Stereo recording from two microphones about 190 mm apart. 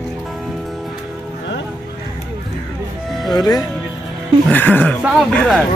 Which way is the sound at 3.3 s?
20° left (ahead or behind).